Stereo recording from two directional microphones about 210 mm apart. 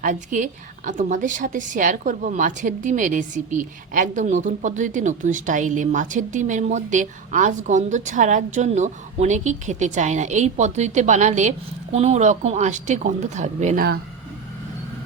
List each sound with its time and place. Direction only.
0.0 s a woman's voice: 35° right (ahead or behind)